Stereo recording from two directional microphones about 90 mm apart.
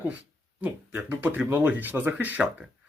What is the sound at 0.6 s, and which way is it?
Speech, 20° right (ahead or behind).